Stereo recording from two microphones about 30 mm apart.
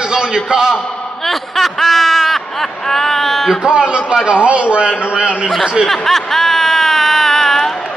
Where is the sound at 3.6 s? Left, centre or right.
Right.